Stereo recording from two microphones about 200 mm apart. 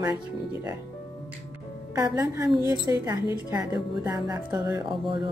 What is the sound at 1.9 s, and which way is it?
A woman's voice, 15° right (ahead or behind).